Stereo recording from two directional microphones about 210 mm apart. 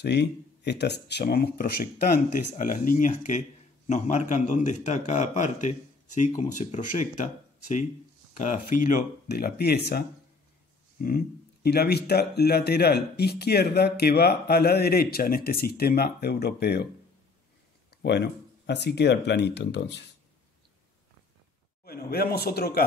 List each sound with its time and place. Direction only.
0.0 s a man's voice: 55° left (ahead or behind)
18.0 s speech: 55° left (ahead or behind)
21.8 s speech: 45° left (ahead or behind)